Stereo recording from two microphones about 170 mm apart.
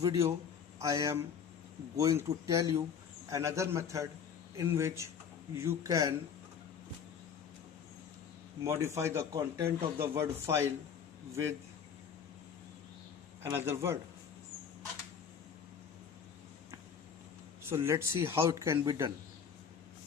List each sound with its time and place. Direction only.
0.0 s a man's voice: 20° right (ahead or behind)
8.6 s a man's voice: 15° right (ahead or behind)
13.4 s a man's voice: 15° right (ahead or behind)
17.6 s a man's voice: 15° right (ahead or behind)